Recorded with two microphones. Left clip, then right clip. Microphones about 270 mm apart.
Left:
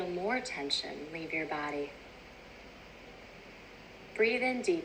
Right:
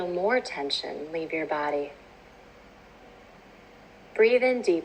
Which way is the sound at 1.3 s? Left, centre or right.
Right.